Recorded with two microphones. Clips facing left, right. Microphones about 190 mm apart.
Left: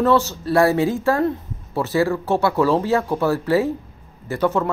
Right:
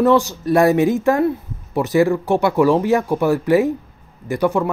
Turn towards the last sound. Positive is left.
turn(degrees=-10)  # may be behind; listen again after turning